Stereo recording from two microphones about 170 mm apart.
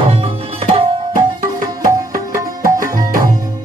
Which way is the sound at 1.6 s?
20° right (ahead or behind).